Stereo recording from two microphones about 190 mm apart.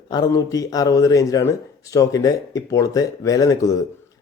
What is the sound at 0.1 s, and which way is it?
Speech, 20° left (ahead or behind).